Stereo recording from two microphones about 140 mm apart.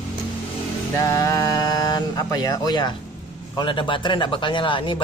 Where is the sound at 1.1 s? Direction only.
25° left (ahead or behind).